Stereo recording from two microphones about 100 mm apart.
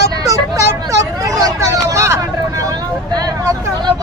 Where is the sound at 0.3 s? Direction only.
30° right (ahead or behind).